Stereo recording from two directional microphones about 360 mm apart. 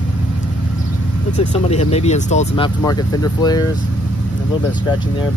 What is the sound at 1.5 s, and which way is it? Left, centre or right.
Speech, centre.